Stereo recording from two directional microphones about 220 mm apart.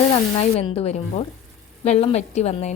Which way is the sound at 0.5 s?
25° left (ahead or behind).